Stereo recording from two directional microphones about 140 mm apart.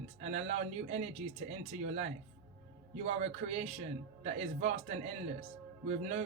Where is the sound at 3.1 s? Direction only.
50° right (ahead or behind).